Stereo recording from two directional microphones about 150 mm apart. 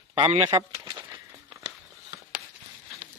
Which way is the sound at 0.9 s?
35° right (ahead or behind).